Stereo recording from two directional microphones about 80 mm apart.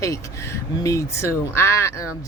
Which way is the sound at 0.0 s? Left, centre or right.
Left.